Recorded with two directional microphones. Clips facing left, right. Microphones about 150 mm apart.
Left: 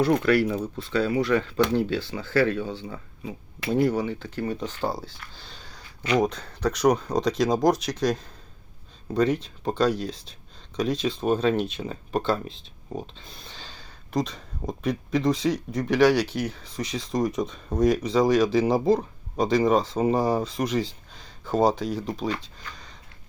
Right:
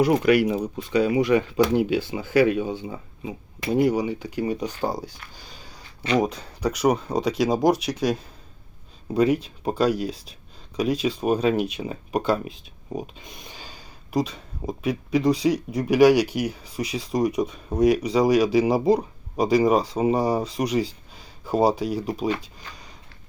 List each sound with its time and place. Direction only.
0.0 s speech: 15° right (ahead or behind)